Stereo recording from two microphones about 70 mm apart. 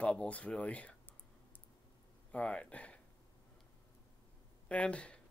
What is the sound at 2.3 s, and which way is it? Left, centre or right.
Speech, centre.